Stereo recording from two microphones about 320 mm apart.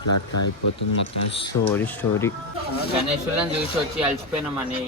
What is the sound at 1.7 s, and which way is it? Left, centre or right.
Speech, centre.